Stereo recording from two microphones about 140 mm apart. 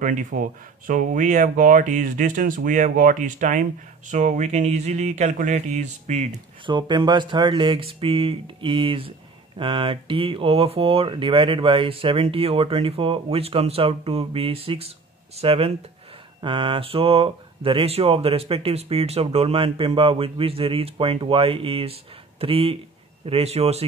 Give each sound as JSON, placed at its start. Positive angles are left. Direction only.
{"t": 0.0, "sound": "speech", "side_deg": -65}
{"t": 6.6, "sound": "speech", "side_deg": -35}